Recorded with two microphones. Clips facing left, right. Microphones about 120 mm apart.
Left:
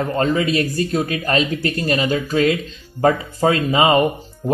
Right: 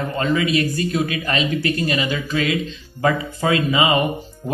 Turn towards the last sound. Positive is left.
turn(degrees=0)  # may be behind; listen again after turning